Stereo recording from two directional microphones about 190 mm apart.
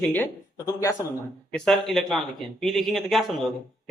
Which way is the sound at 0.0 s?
10° left (ahead or behind).